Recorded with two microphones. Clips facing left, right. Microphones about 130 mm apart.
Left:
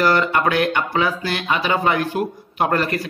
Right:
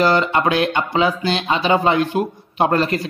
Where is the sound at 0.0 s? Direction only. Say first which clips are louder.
Right 1 dB; 20° right (ahead or behind).